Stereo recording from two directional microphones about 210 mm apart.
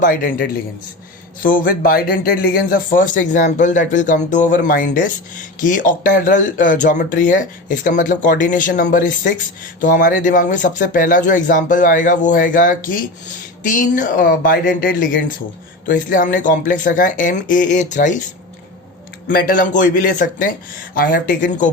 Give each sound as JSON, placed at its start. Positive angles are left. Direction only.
{"t": 0.0, "sound": "a man's voice", "side_deg": 40}
{"t": 19.3, "sound": "speech", "side_deg": 40}